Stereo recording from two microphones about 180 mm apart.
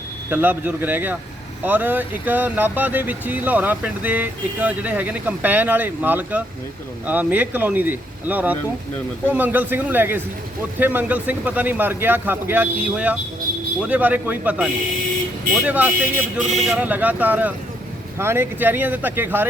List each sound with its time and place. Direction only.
0.3 s speech: 10° right (ahead or behind)